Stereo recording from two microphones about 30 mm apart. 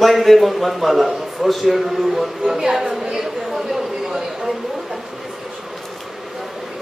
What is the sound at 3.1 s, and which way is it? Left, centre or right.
Chatter, centre.